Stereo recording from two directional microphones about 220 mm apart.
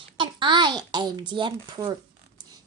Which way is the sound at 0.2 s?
20° right (ahead or behind).